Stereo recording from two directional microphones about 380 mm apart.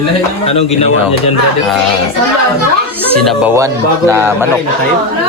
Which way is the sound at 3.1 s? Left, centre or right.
Centre.